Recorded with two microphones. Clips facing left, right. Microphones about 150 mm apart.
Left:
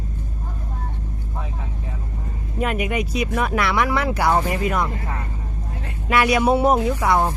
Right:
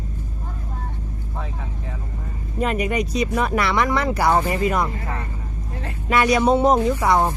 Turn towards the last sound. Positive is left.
turn(degrees=0)  # may be behind; listen again after turning